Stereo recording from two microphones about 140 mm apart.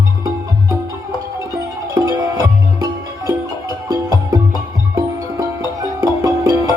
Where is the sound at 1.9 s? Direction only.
25° right (ahead or behind).